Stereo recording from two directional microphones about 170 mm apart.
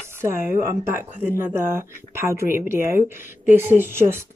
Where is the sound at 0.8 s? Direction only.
15° right (ahead or behind).